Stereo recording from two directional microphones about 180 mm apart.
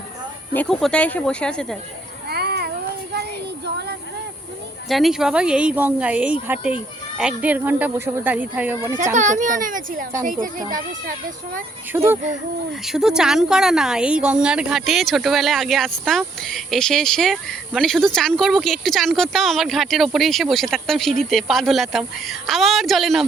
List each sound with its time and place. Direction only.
0.5 s speech: 5° left (ahead or behind)
2.3 s cat: 65° right (ahead or behind)
4.9 s speech: centre (ahead or behind)
9.1 s a child's voice: 45° right (ahead or behind)
11.9 s speech: 10° right (ahead or behind)